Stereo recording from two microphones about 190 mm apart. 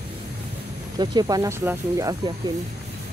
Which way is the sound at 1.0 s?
20° right (ahead or behind).